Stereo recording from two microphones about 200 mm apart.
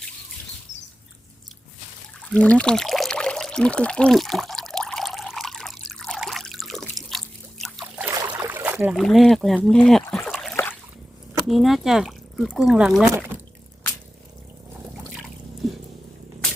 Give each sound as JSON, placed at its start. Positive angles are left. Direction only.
{"t": 0.7, "sound": "rodents", "side_deg": 65}
{"t": 2.2, "sound": "pour", "side_deg": 5}
{"t": 7.9, "sound": "boat", "side_deg": -15}
{"t": 8.4, "sound": "a sound", "side_deg": -10}
{"t": 11.4, "sound": "speech", "side_deg": 0}
{"t": 15.6, "sound": "a sound", "side_deg": 0}